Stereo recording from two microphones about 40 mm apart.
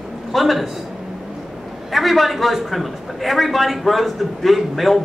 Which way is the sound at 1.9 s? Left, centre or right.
Centre.